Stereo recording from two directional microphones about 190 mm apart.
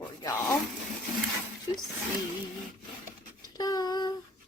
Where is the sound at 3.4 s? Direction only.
20° left (ahead or behind).